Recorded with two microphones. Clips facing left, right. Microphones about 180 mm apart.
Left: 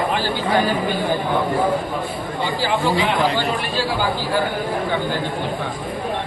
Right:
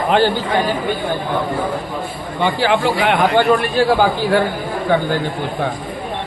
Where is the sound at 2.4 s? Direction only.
70° right (ahead or behind).